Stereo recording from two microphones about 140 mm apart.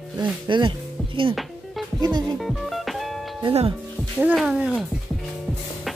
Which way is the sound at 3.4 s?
40° right (ahead or behind).